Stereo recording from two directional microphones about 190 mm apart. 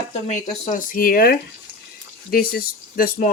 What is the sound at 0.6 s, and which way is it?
Speech, 45° left (ahead or behind).